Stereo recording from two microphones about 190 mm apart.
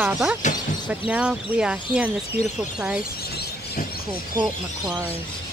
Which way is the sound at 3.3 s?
55° left (ahead or behind).